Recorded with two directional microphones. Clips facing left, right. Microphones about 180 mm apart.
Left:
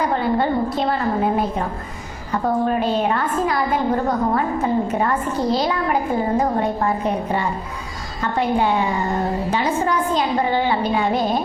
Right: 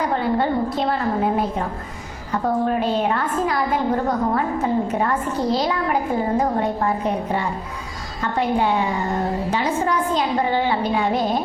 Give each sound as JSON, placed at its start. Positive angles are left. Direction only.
{"t": 0.0, "sound": "a woman's voice", "side_deg": 20}
{"t": 11.1, "sound": "music", "side_deg": 35}